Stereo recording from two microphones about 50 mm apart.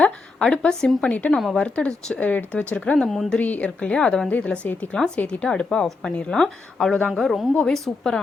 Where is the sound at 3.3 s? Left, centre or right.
Left; by 6.1 s centre.